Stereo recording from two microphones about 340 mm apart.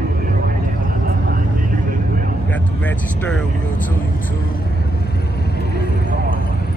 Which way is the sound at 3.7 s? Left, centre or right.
Left.